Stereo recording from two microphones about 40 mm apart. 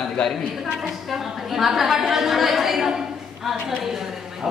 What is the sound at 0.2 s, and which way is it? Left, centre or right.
Speech, left.